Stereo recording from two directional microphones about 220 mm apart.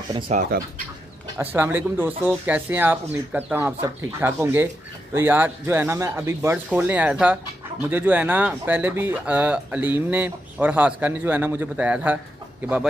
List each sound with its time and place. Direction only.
0.3 s speech: 35° right (ahead or behind)
1.4 s speech: 10° right (ahead or behind)